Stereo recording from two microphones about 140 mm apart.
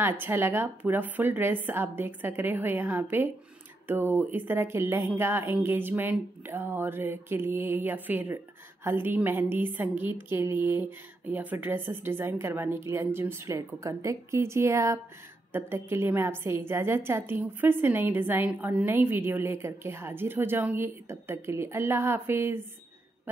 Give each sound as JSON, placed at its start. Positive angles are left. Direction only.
{"t": 0.0, "sound": "a woman's voice", "side_deg": -15}